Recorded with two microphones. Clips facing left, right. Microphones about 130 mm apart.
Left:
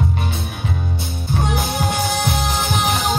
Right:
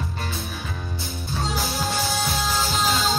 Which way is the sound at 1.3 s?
55° left (ahead or behind).